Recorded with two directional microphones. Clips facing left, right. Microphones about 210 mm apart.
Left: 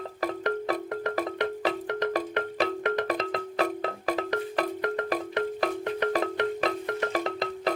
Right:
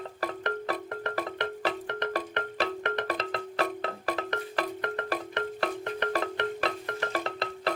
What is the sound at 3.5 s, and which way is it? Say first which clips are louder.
Music: left 2 dB; 10° left (ahead or behind).